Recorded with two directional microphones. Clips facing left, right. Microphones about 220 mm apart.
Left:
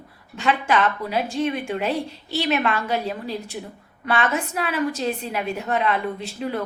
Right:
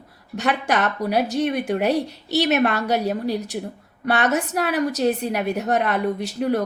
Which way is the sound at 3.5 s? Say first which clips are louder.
Right 5 dB; 50° right (ahead or behind).